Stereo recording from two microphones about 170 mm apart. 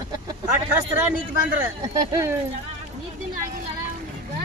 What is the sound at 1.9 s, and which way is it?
Speech, 20° right (ahead or behind).